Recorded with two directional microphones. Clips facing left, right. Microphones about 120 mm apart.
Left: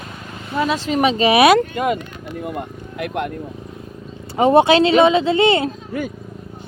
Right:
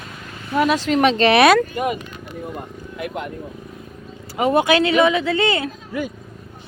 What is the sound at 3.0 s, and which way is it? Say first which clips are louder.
Speech: left 4 dB; 75° left (ahead or behind).